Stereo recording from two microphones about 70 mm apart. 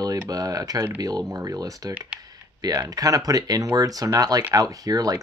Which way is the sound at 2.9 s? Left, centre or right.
Right.